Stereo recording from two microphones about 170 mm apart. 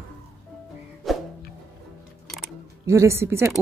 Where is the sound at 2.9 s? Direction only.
15° right (ahead or behind).